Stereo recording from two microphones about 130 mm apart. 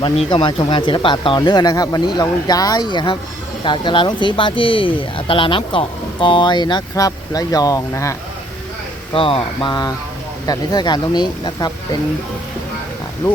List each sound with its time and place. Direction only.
0.0 s speech: 35° left (ahead or behind)
9.1 s speech: 45° left (ahead or behind)